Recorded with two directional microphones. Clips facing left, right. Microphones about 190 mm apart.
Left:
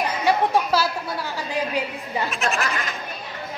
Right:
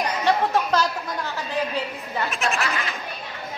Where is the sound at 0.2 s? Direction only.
10° left (ahead or behind).